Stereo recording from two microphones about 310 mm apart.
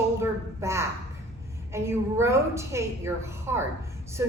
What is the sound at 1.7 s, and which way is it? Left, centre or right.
A woman's voice, centre.